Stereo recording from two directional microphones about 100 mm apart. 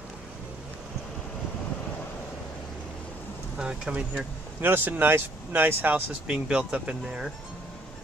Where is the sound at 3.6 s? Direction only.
10° right (ahead or behind).